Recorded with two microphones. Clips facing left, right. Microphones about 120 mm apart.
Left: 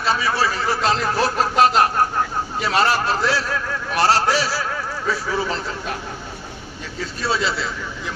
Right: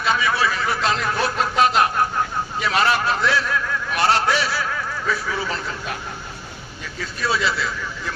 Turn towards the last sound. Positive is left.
turn(degrees=30)  # may be behind; listen again after turning